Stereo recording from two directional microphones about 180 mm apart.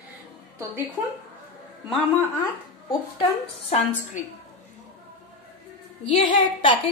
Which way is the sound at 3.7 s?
40° left (ahead or behind).